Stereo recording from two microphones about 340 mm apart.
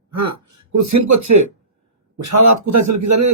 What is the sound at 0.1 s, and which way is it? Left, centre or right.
A man's voice, right.